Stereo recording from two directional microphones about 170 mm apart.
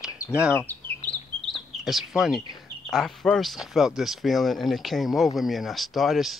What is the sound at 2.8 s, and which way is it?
Speech, centre (ahead or behind).